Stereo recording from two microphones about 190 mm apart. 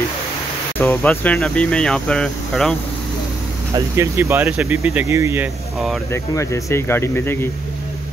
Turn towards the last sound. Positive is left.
turn(degrees=10)  # may be behind; listen again after turning